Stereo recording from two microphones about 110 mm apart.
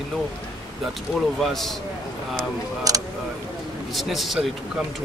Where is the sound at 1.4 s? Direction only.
Centre (ahead or behind).